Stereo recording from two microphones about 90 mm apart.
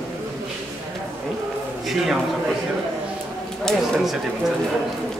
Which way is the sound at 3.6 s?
5° left (ahead or behind).